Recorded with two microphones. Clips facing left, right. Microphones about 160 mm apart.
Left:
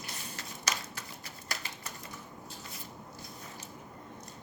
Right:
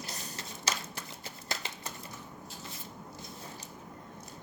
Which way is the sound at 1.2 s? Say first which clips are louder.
Right 3 dB; 25° right (ahead or behind).